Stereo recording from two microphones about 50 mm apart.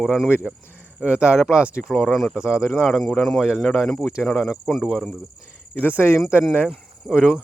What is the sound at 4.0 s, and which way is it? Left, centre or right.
Speech, centre.